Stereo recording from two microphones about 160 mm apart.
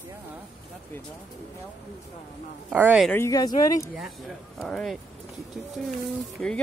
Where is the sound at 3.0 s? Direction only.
15° left (ahead or behind).